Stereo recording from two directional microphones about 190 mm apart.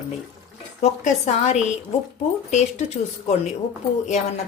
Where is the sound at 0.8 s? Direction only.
40° left (ahead or behind).